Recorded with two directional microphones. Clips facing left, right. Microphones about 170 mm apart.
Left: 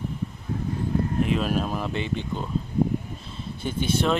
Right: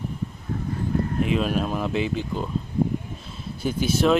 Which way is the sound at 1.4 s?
Centre (ahead or behind).